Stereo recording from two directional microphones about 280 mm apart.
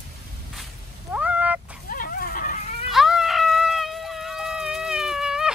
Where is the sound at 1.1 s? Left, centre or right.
Centre.